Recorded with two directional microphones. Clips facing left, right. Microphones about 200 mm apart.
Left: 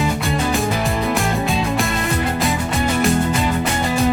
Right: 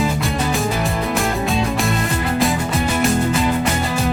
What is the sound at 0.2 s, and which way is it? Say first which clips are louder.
Music: left 1 dB; centre (ahead or behind).